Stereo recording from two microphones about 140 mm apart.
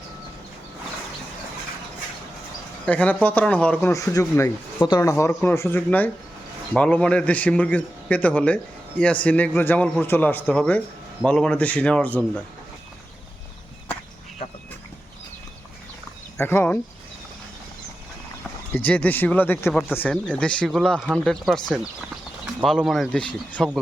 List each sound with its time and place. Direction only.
2.8 s a man's voice: 10° left (ahead or behind)
16.4 s a man's voice: 15° left (ahead or behind)
18.7 s a man's voice: 10° left (ahead or behind)